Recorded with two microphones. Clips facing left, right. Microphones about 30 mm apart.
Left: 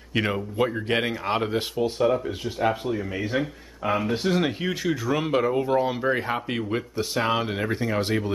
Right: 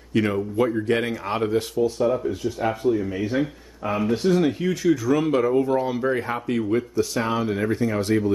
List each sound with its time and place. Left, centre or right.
0.1 s speech: left
1.8 s speech: left
2.6 s speech: left